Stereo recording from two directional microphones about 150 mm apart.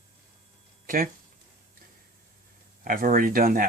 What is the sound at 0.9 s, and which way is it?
Speech, 65° right (ahead or behind).